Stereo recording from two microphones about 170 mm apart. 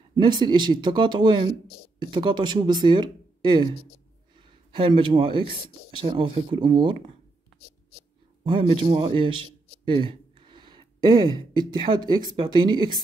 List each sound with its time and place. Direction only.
0.1 s speech: 25° right (ahead or behind)
8.5 s a man's voice: 30° right (ahead or behind)